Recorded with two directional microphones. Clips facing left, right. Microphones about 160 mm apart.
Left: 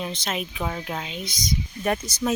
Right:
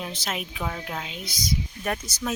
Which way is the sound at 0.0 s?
5° right (ahead or behind).